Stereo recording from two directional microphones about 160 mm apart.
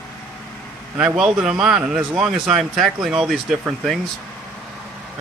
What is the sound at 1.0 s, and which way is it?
Speech, 5° right (ahead or behind).